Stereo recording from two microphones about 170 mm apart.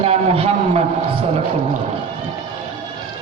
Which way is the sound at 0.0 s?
35° right (ahead or behind).